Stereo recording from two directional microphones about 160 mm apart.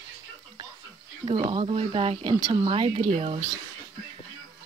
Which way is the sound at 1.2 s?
30° right (ahead or behind).